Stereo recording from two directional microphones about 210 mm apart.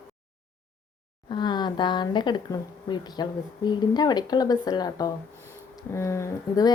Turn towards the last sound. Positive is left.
turn(degrees=15)  # may be behind; listen again after turning